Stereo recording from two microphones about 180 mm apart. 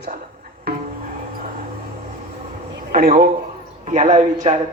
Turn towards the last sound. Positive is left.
turn(degrees=-40)  # may be behind; listen again after turning